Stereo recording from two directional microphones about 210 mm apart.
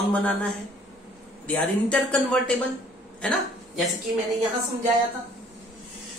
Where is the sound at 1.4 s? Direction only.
5° left (ahead or behind).